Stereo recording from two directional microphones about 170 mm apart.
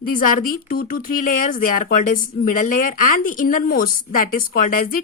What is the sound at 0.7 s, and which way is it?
Speech, 60° left (ahead or behind).